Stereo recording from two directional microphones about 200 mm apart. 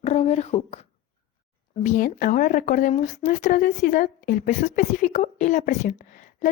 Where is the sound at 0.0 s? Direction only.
35° left (ahead or behind).